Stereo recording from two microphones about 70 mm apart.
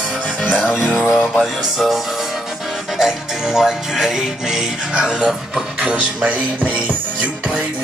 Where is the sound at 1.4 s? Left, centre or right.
Centre.